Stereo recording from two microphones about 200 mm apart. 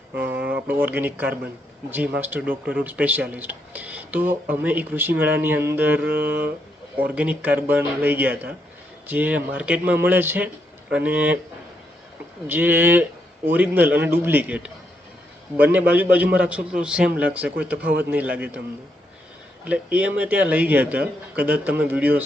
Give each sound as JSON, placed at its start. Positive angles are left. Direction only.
{"t": 0.3, "sound": "a sound", "side_deg": -55}
{"t": 0.5, "sound": "speech", "side_deg": -10}
{"t": 7.2, "sound": "speech", "side_deg": -5}
{"t": 12.5, "sound": "speech", "side_deg": -10}
{"t": 19.6, "sound": "speech", "side_deg": -5}